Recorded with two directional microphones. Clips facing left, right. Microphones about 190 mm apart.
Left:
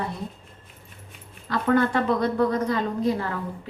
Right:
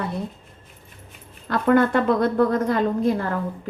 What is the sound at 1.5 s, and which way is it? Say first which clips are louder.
A woman's voice: right 4 dB; 55° right (ahead or behind).